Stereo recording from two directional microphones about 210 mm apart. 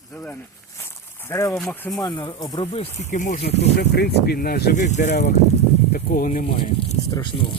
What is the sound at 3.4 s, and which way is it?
Speech, 50° left (ahead or behind).